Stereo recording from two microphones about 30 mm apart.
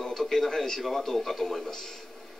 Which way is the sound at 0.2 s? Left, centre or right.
Centre.